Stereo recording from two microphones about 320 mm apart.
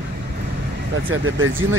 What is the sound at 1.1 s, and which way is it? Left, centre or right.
Speech, right.